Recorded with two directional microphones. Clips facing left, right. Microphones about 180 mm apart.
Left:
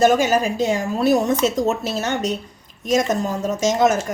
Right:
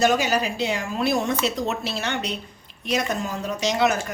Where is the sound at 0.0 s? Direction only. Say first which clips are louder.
Left 5 dB; 50° left (ahead or behind).